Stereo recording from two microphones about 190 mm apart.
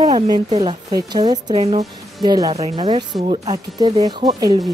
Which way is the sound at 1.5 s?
35° right (ahead or behind).